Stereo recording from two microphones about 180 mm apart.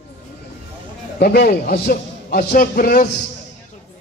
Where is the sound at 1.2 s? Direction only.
60° left (ahead or behind).